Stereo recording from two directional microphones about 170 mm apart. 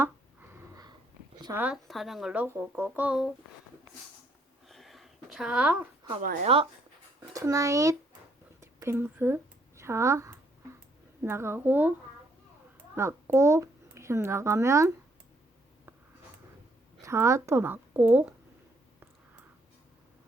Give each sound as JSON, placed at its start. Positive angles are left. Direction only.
{"t": 0.0, "sound": "a sound", "side_deg": -15}
{"t": 1.5, "sound": "speech", "side_deg": -5}
{"t": 4.7, "sound": "a sound", "side_deg": 0}
{"t": 6.4, "sound": "speech", "side_deg": -35}
{"t": 7.2, "sound": "a child's voice", "side_deg": -20}
{"t": 13.0, "sound": "a child's voice", "side_deg": -15}
{"t": 17.0, "sound": "speech", "side_deg": -15}